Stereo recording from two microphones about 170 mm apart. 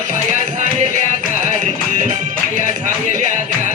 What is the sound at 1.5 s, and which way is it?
Music, 45° right (ahead or behind).